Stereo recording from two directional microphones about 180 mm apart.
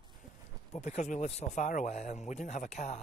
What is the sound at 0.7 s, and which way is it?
Speech, 40° left (ahead or behind).